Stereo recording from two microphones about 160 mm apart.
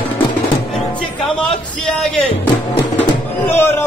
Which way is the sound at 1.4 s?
5° left (ahead or behind).